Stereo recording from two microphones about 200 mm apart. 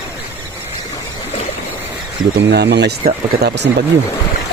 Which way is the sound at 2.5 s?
55° right (ahead or behind).